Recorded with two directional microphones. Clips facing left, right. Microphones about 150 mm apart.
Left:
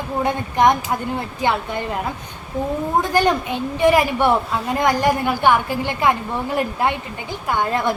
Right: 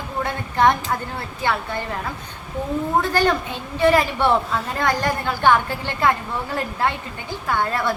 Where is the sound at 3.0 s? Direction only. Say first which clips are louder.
Left 4 dB; 15° left (ahead or behind).